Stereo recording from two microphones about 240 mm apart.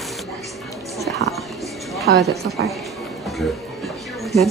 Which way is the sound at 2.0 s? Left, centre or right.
Right.